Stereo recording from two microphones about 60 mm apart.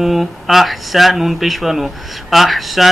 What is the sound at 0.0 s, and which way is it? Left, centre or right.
Speech, centre.